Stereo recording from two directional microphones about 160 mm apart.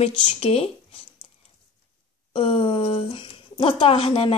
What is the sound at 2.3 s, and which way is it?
Speech, 35° left (ahead or behind).